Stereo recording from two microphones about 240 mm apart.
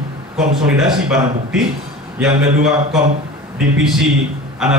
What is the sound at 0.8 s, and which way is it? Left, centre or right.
A man's voice, centre.